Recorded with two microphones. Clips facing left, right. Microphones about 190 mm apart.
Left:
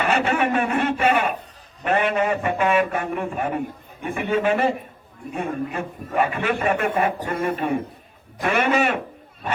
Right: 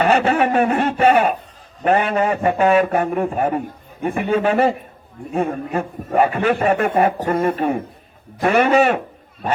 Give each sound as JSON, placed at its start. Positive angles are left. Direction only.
{"t": 0.0, "sound": "a man's voice", "side_deg": -35}